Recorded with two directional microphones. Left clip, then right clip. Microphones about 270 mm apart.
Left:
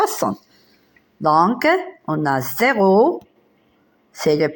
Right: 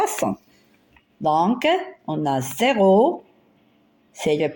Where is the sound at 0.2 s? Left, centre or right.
Left.